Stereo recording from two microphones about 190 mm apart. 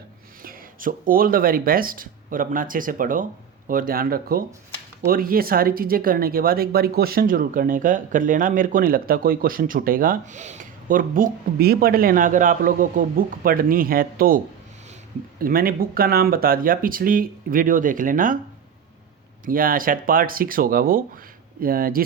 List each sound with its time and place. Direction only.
0.4 s speech: 45° right (ahead or behind)
19.5 s speech: 50° right (ahead or behind)